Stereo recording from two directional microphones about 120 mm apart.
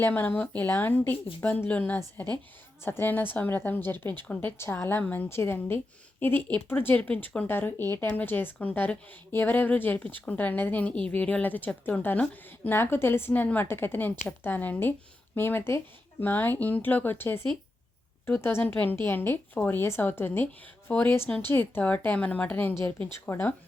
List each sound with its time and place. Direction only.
0.0 s speech: 15° left (ahead or behind)